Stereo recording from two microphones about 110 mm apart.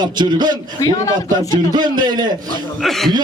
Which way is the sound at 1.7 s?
40° right (ahead or behind).